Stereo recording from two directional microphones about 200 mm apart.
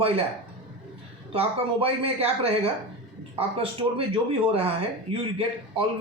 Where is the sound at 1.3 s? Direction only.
30° right (ahead or behind).